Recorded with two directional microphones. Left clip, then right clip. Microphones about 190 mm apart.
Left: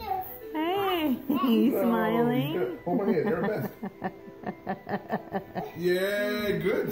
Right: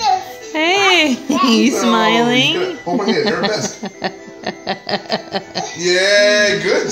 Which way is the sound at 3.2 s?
15° right (ahead or behind).